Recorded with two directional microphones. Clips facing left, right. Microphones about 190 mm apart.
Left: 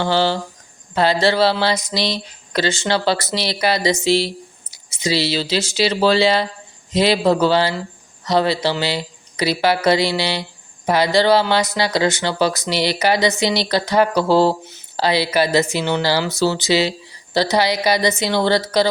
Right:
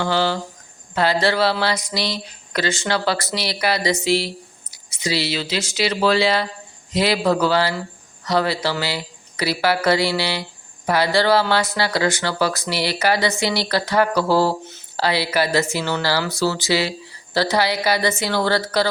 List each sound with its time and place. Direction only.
0.0 s speech: 30° left (ahead or behind)